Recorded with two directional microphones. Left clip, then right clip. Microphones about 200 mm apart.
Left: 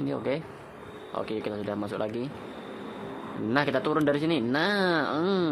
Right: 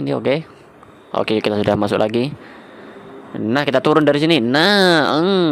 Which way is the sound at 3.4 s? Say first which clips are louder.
Right 10 dB; 40° right (ahead or behind).